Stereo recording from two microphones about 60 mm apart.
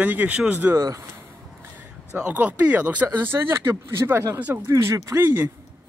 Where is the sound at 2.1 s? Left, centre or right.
Centre.